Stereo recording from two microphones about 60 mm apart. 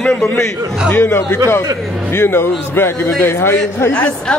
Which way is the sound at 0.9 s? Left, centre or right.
Left.